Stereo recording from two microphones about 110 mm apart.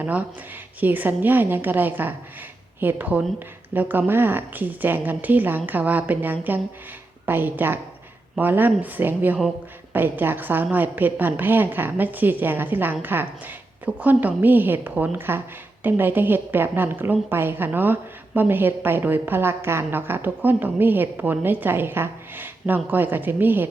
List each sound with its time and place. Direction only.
0.0 s a woman's voice: 15° right (ahead or behind)